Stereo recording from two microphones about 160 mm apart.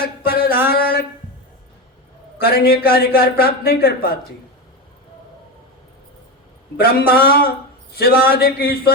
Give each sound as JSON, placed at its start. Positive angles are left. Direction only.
{"t": 0.0, "sound": "a sound", "side_deg": 75}
{"t": 2.4, "sound": "speech", "side_deg": 75}
{"t": 6.7, "sound": "speech", "side_deg": 75}